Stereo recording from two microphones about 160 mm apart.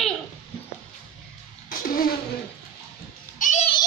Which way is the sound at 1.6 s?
65° left (ahead or behind).